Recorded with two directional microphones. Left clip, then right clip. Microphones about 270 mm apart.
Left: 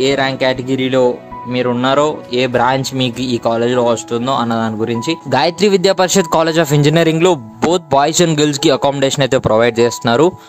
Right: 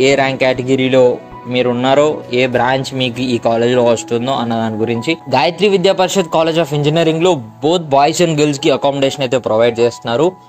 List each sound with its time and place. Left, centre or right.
0.0 s speech: centre
5.3 s a man's voice: centre